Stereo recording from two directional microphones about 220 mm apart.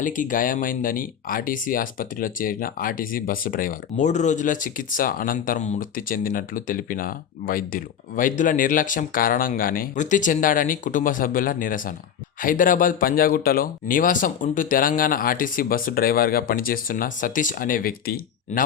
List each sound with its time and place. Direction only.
0.0 s speech: 35° left (ahead or behind)